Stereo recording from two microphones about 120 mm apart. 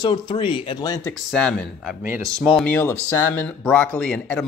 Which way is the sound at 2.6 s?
15° left (ahead or behind).